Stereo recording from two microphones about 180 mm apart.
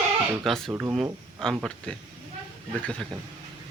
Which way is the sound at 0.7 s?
10° right (ahead or behind).